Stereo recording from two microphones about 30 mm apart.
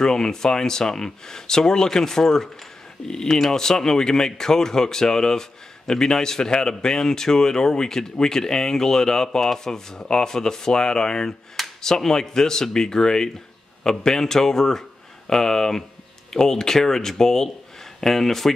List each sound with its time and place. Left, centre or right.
0.0 s speech: left